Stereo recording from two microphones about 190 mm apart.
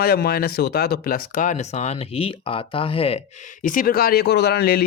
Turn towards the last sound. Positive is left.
turn(degrees=55)  # may be behind; listen again after turning